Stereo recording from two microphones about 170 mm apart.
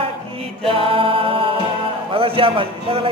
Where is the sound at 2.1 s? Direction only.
30° right (ahead or behind).